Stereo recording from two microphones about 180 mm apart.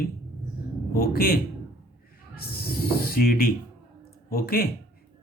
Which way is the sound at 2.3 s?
60° left (ahead or behind).